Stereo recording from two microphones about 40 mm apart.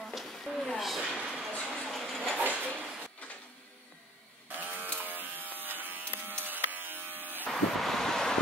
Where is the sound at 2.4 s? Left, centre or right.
Right.